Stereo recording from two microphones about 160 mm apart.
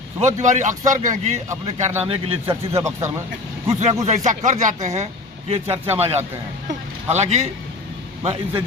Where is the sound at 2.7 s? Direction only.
20° right (ahead or behind).